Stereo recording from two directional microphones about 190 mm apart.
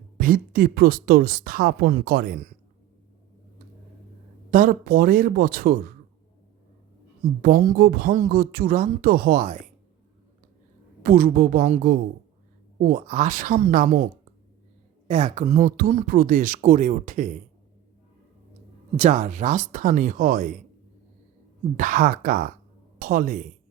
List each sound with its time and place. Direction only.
0.2 s speech: 50° right (ahead or behind)
4.5 s speech: 50° right (ahead or behind)
7.4 s speech: 45° right (ahead or behind)
11.0 s speech: 50° right (ahead or behind)
18.9 s speech: 40° right (ahead or behind)
21.8 s speech: 45° right (ahead or behind)